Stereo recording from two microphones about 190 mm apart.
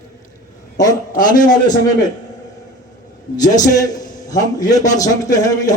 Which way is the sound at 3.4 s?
20° left (ahead or behind).